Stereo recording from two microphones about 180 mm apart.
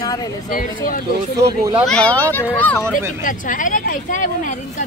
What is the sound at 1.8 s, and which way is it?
Speech, 5° left (ahead or behind).